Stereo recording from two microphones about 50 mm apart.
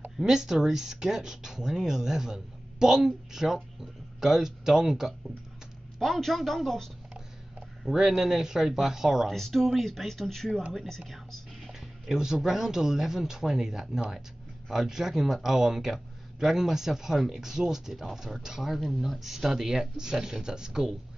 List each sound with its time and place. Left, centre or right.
0.2 s speech: centre
5.9 s speech: centre
7.8 s speech: centre
11.6 s speech: centre